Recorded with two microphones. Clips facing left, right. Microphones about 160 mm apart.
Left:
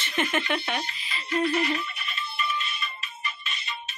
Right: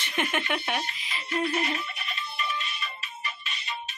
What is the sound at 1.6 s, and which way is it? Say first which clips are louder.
Music: left 3 dB; 40° right (ahead or behind).